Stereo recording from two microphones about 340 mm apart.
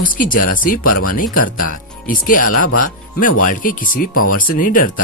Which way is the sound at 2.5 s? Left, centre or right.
Left.